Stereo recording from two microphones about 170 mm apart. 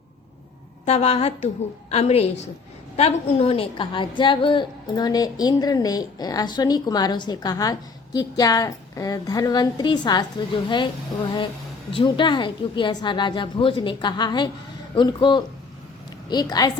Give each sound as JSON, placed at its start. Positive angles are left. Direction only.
{"t": 0.9, "sound": "a woman's voice", "side_deg": 40}